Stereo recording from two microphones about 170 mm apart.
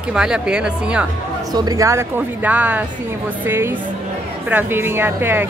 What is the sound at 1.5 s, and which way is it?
A woman's voice, 20° right (ahead or behind).